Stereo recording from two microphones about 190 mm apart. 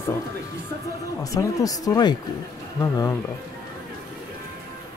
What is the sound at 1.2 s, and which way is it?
Speech, 20° left (ahead or behind).